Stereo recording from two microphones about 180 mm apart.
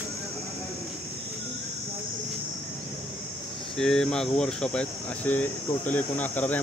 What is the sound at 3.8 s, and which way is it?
Speech, 5° left (ahead or behind).